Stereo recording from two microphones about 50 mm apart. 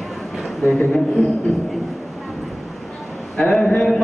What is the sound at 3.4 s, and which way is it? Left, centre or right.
Speech, centre.